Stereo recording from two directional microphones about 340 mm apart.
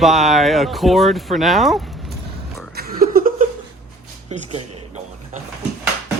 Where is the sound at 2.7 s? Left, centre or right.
Right.